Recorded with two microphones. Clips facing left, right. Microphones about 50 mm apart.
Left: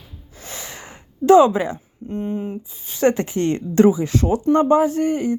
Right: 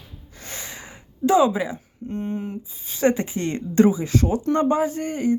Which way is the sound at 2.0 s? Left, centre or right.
Left.